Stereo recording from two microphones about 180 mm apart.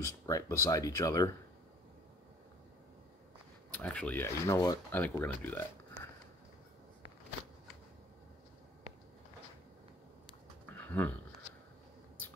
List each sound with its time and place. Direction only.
0.0 s speech: 15° left (ahead or behind)
3.7 s speech: 5° left (ahead or behind)
10.7 s a sound: 10° left (ahead or behind)